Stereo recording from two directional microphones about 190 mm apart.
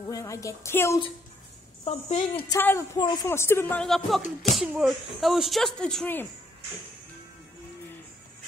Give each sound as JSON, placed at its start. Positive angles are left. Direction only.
{"t": 0.0, "sound": "a woman's voice", "side_deg": 15}
{"t": 1.9, "sound": "speech", "side_deg": 30}
{"t": 2.5, "sound": "a woman's voice", "side_deg": 15}